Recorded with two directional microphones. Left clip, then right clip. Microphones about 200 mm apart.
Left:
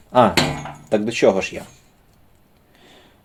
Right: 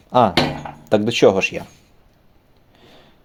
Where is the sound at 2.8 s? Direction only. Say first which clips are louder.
Right 1 dB; 20° right (ahead or behind).